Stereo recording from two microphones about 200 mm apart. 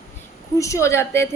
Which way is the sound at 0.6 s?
15° left (ahead or behind).